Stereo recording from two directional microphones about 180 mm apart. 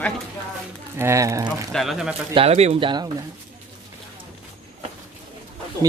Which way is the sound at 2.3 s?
35° right (ahead or behind).